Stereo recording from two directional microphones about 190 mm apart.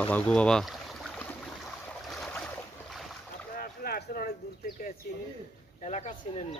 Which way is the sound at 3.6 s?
50° left (ahead or behind).